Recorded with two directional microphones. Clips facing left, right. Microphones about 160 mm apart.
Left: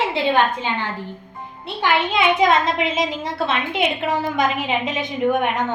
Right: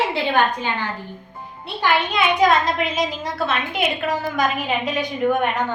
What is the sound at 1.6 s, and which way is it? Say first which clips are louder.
A child's voice: even; 20° left (ahead or behind).